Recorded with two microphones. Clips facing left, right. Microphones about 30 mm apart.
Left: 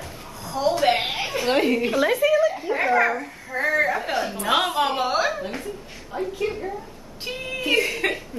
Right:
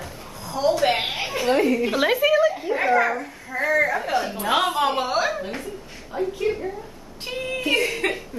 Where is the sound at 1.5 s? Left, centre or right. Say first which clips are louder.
Right 1 dB; left.